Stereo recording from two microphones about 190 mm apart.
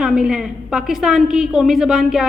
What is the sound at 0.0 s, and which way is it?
A woman's voice, 5° right (ahead or behind).